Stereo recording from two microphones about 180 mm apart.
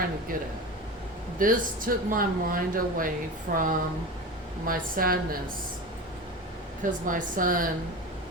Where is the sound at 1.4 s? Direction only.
50° right (ahead or behind).